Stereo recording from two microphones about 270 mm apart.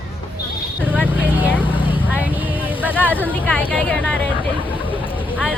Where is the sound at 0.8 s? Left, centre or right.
Centre.